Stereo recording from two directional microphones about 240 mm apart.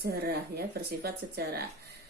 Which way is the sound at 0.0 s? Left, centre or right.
Right.